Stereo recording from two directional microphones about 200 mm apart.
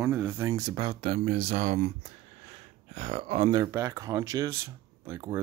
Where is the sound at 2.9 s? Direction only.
35° right (ahead or behind).